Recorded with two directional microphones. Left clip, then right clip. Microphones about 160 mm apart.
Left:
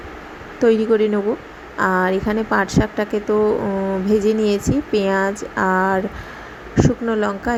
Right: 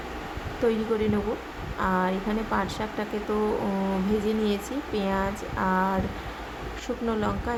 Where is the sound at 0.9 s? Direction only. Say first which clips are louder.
Left 10 dB; 35° left (ahead or behind).